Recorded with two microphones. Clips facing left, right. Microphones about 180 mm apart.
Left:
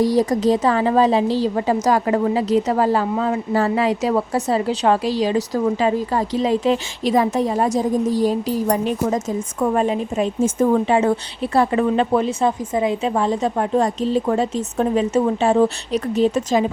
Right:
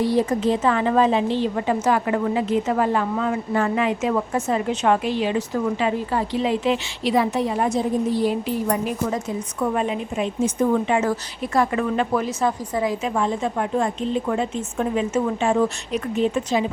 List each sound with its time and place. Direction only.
0.0 s a woman's voice: 40° left (ahead or behind)
9.1 s a woman's voice: 40° left (ahead or behind)
10.8 s speech: 30° left (ahead or behind)
13.1 s a woman's voice: 35° left (ahead or behind)